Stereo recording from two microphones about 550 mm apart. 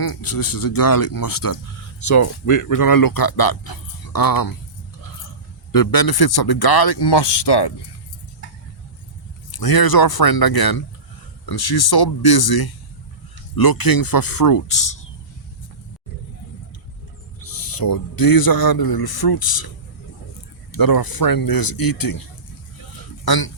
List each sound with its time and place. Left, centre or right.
0.0 s speech: left
5.7 s speech: left
9.5 s speech: left
17.4 s speech: left
20.7 s speech: left
23.2 s speech: left